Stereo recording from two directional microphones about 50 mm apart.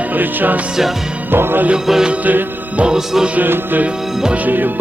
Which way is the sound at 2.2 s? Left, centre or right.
Right.